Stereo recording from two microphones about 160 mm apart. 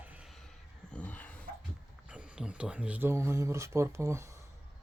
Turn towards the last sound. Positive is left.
turn(degrees=-15)  # may be behind; listen again after turning